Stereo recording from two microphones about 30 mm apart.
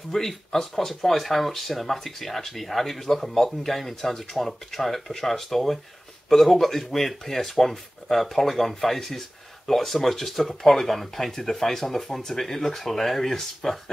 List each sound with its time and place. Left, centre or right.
0.1 s speech: centre
4.5 s speech: centre